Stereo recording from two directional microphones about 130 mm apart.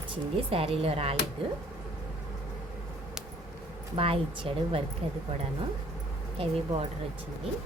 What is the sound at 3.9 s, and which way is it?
Speech, 45° right (ahead or behind).